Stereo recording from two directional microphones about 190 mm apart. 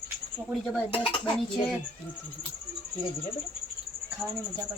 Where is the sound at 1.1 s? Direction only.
25° left (ahead or behind).